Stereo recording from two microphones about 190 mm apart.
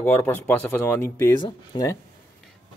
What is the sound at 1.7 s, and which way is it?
Speech, 25° left (ahead or behind).